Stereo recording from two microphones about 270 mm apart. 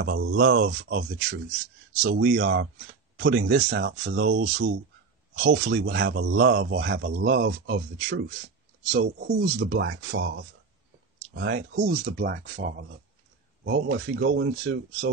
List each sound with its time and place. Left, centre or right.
0.0 s speech: right
13.7 s speech: right